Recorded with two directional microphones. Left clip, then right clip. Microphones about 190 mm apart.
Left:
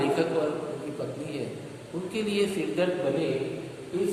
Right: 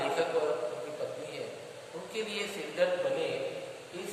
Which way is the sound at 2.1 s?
15° left (ahead or behind).